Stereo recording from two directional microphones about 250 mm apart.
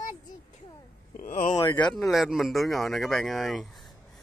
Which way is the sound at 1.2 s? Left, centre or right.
Left.